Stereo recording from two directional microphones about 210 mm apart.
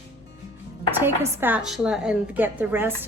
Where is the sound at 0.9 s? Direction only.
10° right (ahead or behind).